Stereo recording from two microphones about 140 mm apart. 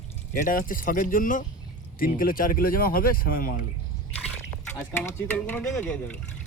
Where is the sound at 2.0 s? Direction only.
90° left.